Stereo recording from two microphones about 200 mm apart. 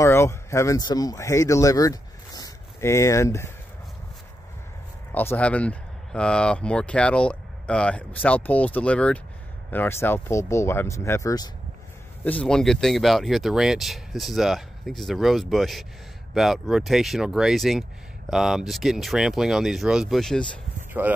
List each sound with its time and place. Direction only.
0.0 s speech: 15° left (ahead or behind)
5.1 s speech: 10° left (ahead or behind)
12.3 s speech: 5° left (ahead or behind)
21.0 s speech: 10° right (ahead or behind)